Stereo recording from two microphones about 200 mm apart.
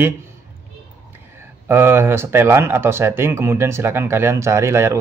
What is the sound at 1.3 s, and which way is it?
Speech, 10° right (ahead or behind).